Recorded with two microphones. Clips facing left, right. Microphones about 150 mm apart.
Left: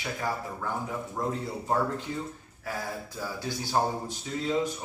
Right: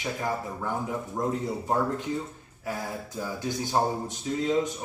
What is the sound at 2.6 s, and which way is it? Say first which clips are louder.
Speech: right 2 dB; 20° right (ahead or behind).